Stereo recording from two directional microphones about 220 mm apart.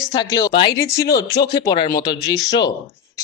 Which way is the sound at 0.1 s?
20° left (ahead or behind).